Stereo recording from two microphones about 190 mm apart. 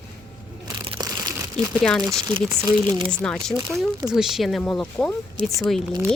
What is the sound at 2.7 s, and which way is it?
Speech, 25° right (ahead or behind).